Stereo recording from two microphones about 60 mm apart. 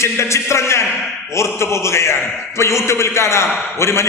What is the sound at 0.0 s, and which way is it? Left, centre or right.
A man's voice, left.